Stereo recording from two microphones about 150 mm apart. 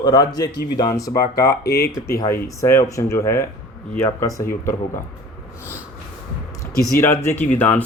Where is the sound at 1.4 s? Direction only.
90° left.